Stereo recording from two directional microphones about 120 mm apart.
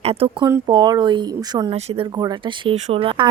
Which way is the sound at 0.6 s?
35° right (ahead or behind).